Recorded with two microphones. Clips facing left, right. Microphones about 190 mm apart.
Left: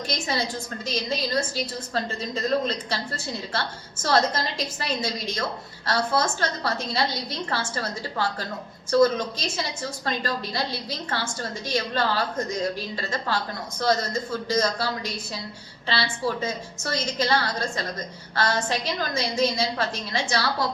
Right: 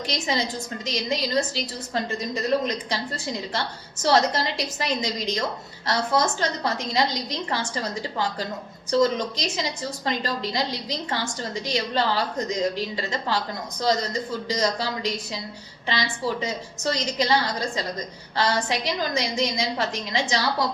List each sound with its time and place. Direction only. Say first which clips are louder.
0.1 s a woman's voice: right 2 dB; 15° right (ahead or behind)